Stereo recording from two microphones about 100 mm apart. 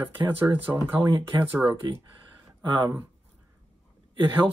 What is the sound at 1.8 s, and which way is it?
Speech, 50° right (ahead or behind).